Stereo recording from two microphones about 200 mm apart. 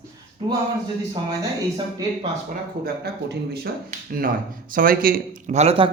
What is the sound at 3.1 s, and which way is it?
Speech, 55° right (ahead or behind).